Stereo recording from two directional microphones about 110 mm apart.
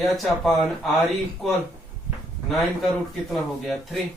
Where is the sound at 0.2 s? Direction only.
Centre (ahead or behind).